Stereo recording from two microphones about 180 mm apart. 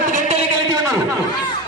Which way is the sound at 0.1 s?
40° right (ahead or behind).